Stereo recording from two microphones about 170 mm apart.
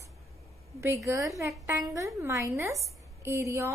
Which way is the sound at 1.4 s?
20° right (ahead or behind).